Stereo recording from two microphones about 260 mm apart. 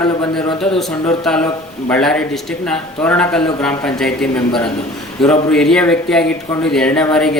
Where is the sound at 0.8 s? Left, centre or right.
Centre.